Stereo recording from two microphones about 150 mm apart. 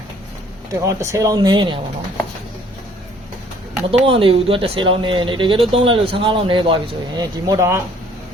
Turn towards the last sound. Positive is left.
turn(degrees=-20)  # may be behind; listen again after turning